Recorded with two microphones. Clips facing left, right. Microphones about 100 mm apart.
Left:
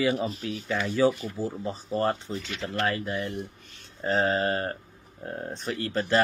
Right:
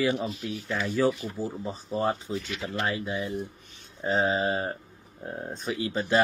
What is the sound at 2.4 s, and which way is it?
Speech, 15° right (ahead or behind).